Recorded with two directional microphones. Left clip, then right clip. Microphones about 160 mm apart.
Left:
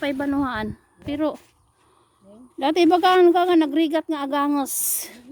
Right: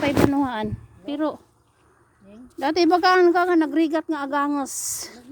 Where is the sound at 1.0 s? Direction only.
35° left (ahead or behind).